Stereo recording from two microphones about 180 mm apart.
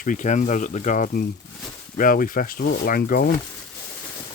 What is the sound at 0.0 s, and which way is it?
Speech, 45° left (ahead or behind).